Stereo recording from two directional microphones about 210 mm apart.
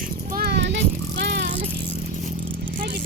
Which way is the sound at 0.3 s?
50° right (ahead or behind).